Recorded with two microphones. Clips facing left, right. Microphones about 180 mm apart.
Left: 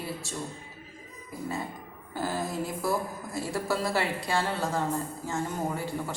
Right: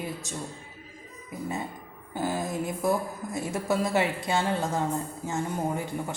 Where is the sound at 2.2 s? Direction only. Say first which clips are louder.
Right 2 dB; 15° right (ahead or behind).